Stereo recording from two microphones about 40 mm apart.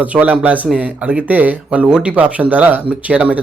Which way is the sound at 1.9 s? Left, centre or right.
Right.